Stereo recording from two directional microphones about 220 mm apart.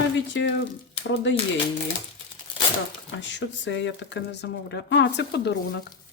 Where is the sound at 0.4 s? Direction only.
55° left (ahead or behind).